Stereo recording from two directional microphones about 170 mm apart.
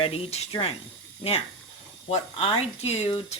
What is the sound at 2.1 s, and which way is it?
Speech, 30° left (ahead or behind).